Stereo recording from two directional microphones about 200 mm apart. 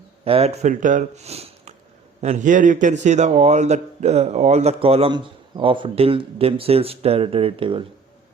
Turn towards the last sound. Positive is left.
turn(degrees=-25)  # may be behind; listen again after turning